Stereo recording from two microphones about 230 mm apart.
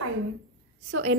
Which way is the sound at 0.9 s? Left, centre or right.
Right.